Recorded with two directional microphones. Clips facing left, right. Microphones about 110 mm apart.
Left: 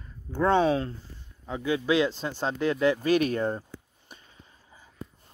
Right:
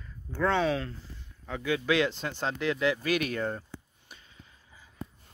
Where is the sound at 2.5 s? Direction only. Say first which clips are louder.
Left 4 dB; 35° left (ahead or behind).